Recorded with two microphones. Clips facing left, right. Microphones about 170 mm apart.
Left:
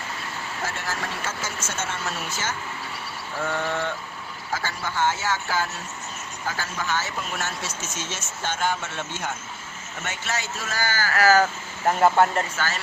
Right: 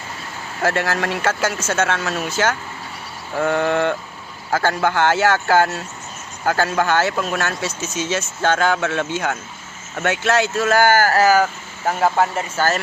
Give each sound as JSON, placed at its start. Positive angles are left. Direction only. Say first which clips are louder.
{"t": 0.6, "sound": "speech", "louder": "right 12 dB", "side_deg": -85}
{"t": 3.4, "sound": "speech", "louder": "right 9 dB", "side_deg": -65}
{"t": 8.1, "sound": "speech", "louder": "right 14 dB", "side_deg": -90}
{"t": 11.9, "sound": "speech", "louder": "right 1 dB", "side_deg": 0}
{"t": 12.5, "sound": "speech", "louder": "right 9 dB", "side_deg": -45}